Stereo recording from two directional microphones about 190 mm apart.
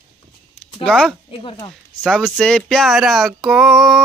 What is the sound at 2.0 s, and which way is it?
Speech, centre (ahead or behind).